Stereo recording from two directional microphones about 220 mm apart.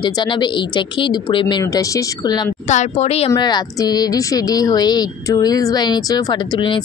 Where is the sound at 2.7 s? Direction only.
30° left (ahead or behind).